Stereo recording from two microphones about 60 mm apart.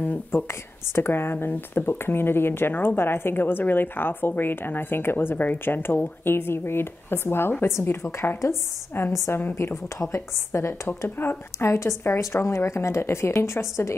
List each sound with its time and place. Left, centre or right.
0.0 s a woman's voice: left
9.3 s speech: left
10.0 s a woman's voice: left